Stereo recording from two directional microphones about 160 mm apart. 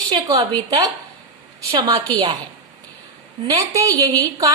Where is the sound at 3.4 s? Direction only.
20° right (ahead or behind).